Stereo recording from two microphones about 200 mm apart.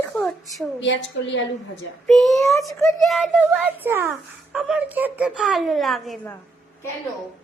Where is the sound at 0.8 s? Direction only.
65° left (ahead or behind).